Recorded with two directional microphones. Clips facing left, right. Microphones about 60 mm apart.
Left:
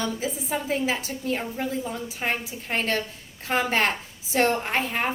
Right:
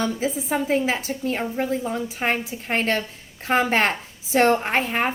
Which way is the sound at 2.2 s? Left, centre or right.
Right.